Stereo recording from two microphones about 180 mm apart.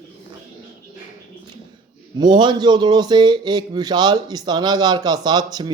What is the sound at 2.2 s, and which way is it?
Speech, 25° right (ahead or behind).